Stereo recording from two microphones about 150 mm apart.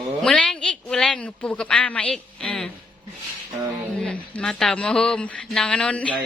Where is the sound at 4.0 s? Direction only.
5° left (ahead or behind).